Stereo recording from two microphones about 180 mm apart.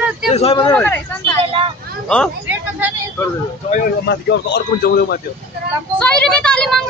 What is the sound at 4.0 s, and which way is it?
Speech, 70° left (ahead or behind).